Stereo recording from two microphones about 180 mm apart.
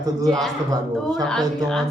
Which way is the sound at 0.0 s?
20° right (ahead or behind).